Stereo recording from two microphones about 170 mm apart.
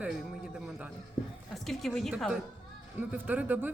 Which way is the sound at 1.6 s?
Centre (ahead or behind).